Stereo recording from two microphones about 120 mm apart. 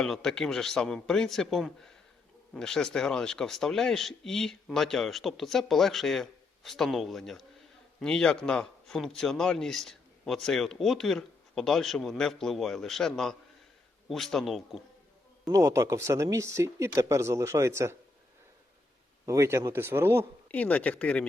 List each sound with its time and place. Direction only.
0.0 s a man's voice: 5° left (ahead or behind)
15.5 s speech: 25° right (ahead or behind)
19.2 s speech: 25° right (ahead or behind)
20.5 s speech: 10° left (ahead or behind)